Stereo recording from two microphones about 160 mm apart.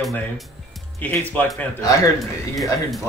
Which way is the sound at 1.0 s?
10° left (ahead or behind).